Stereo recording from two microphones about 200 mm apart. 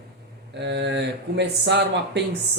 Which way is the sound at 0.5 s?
60° right (ahead or behind).